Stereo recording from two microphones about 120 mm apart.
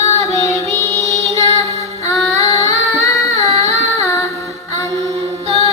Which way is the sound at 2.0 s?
65° right (ahead or behind).